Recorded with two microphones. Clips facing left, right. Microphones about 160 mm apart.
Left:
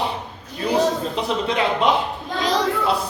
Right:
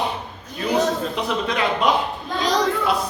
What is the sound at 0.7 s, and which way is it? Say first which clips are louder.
A man's voice: left 1 dB; 30° left (ahead or behind).